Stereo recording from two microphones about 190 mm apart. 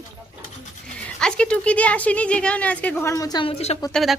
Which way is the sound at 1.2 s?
5° left (ahead or behind).